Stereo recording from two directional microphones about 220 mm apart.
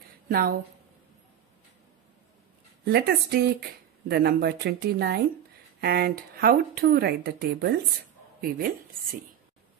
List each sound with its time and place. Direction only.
0.3 s speech: 40° right (ahead or behind)
2.8 s a woman's voice: 45° right (ahead or behind)